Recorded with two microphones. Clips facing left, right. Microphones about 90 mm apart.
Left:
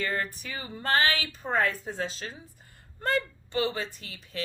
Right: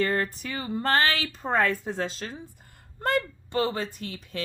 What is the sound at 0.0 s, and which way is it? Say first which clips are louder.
Speech: right 5 dB; 40° right (ahead or behind).